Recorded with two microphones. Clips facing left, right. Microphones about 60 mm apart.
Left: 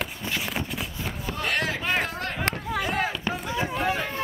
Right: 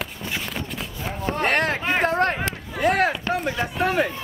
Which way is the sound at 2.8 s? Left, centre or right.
Right.